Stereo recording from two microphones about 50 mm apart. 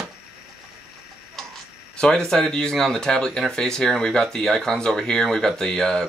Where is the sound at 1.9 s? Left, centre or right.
Centre.